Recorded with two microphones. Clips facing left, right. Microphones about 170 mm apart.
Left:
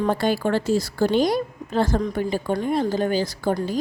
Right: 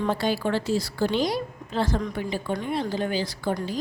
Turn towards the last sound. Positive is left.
turn(degrees=45)  # may be behind; listen again after turning